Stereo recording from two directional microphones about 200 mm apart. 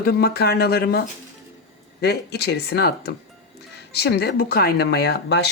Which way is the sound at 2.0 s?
55° left (ahead or behind).